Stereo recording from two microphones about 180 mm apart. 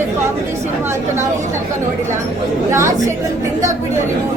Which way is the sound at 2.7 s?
15° right (ahead or behind).